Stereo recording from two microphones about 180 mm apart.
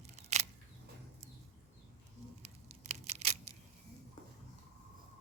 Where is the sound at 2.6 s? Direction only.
35° right (ahead or behind).